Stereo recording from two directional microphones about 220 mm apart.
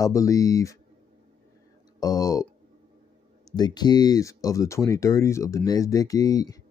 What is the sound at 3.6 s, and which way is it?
Speech, 20° left (ahead or behind).